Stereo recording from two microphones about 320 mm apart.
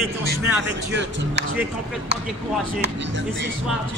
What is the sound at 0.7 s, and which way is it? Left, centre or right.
Speech, right.